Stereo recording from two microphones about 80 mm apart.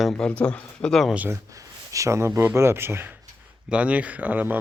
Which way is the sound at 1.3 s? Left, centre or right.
Right.